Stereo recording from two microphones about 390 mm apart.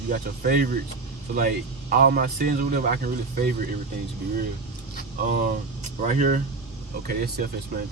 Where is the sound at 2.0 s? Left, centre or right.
Right.